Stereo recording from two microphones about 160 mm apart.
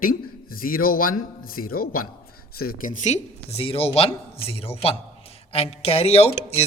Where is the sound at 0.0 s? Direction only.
60° left (ahead or behind).